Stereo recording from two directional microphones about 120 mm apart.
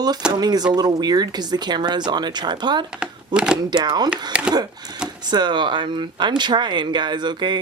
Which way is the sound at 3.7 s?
35° right (ahead or behind).